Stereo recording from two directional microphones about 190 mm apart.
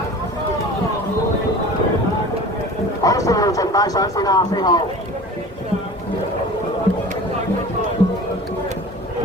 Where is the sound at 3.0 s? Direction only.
15° left (ahead or behind).